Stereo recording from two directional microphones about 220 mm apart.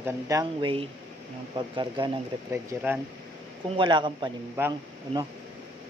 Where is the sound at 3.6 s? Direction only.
20° right (ahead or behind).